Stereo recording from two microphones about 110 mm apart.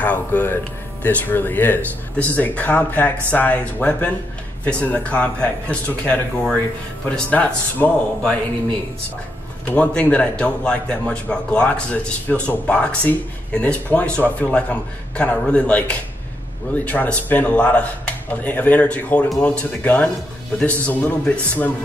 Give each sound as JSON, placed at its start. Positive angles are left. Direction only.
{"t": 0.0, "sound": "a man's voice", "side_deg": 15}
{"t": 9.7, "sound": "speech", "side_deg": 10}